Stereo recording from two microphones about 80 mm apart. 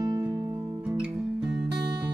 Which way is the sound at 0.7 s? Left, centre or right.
Centre.